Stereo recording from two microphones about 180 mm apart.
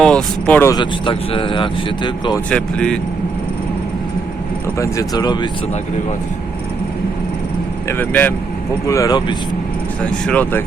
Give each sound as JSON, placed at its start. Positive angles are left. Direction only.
{"t": 0.0, "sound": "speech", "side_deg": 5}
{"t": 0.7, "sound": "speech", "side_deg": 25}
{"t": 2.5, "sound": "speech", "side_deg": 5}
{"t": 4.8, "sound": "speech", "side_deg": 20}
{"t": 7.9, "sound": "speech", "side_deg": 10}
{"t": 10.2, "sound": "speech", "side_deg": 10}